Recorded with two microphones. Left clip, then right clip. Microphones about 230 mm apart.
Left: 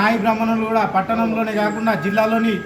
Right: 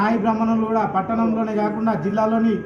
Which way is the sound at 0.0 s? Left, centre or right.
Left.